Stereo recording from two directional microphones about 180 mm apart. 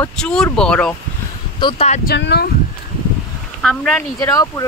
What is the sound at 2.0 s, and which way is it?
Speech, 70° left (ahead or behind).